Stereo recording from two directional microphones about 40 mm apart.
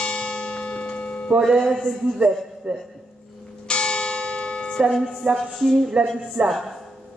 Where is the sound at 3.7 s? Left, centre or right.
Left.